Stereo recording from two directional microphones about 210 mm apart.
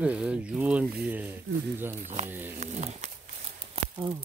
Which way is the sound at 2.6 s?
35° right (ahead or behind).